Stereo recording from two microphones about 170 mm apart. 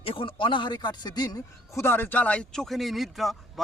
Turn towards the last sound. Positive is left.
turn(degrees=0)  # may be behind; listen again after turning